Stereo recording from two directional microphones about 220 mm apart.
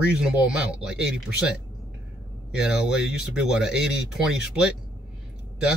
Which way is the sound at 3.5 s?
5° right (ahead or behind).